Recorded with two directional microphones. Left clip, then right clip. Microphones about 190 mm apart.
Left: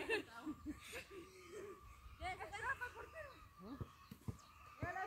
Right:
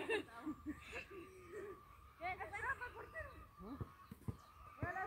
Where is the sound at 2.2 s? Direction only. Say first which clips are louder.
Right 2 dB; 60° left (ahead or behind).